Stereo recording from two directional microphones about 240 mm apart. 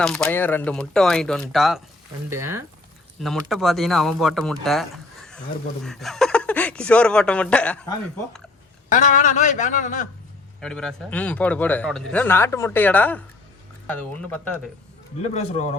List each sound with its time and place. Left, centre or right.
0.0 s speech: centre
2.3 s speech: centre
3.2 s speech: centre
8.9 s speech: left
10.6 s speech: centre
15.2 s speech: left